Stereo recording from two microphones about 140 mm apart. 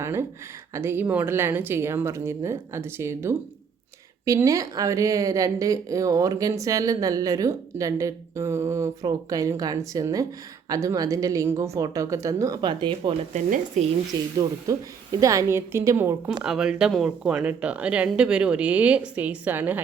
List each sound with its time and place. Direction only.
0.0 s speech: 20° right (ahead or behind); by 13.1 s 35° right (ahead or behind)
13.3 s speech: 55° right (ahead or behind)
14.3 s speech: 25° right (ahead or behind)
16.4 s speech: 5° right (ahead or behind)